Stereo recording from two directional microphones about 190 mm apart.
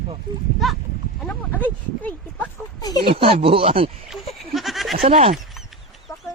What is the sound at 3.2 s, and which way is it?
Speech, 30° right (ahead or behind).